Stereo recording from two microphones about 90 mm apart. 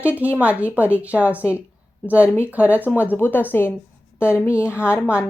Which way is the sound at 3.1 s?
20° left (ahead or behind).